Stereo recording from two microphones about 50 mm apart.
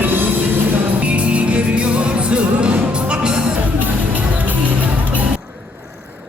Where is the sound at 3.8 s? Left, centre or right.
Right.